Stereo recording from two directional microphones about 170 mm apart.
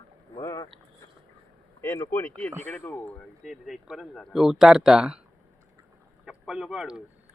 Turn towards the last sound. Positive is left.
turn(degrees=-5)  # may be behind; listen again after turning